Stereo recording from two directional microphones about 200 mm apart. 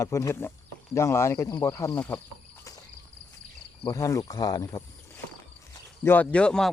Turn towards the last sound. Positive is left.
turn(degrees=5)  # may be behind; listen again after turning